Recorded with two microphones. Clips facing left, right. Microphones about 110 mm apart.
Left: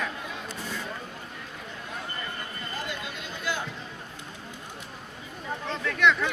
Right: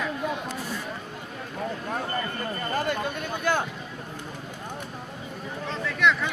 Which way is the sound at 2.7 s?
50° right (ahead or behind).